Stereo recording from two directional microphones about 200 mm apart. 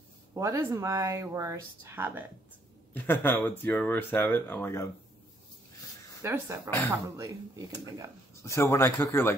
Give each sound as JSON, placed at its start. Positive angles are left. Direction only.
{"t": 0.3, "sound": "speech", "side_deg": -15}
{"t": 2.9, "sound": "speech", "side_deg": 10}
{"t": 6.2, "sound": "speech", "side_deg": -15}
{"t": 8.4, "sound": "speech", "side_deg": 15}